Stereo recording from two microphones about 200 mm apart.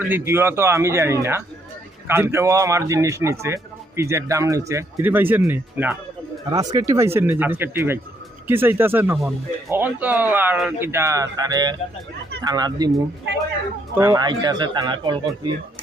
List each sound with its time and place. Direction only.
0.0 s a man's voice: 10° right (ahead or behind)
13.9 s speech: 15° right (ahead or behind)